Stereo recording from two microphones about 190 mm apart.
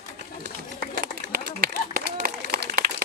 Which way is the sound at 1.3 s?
50° right (ahead or behind).